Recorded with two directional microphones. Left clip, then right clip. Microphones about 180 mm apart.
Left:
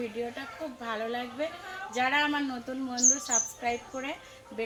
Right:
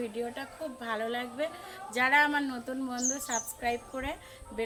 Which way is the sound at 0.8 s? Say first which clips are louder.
Even; 20° right (ahead or behind).